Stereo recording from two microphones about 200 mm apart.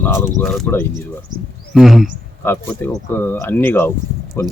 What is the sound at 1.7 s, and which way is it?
Speech, centre (ahead or behind).